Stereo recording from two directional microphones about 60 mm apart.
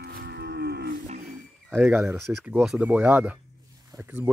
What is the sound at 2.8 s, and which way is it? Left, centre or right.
Speech, right.